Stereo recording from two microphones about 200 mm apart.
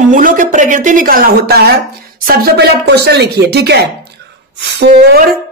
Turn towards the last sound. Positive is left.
turn(degrees=-50)  # may be behind; listen again after turning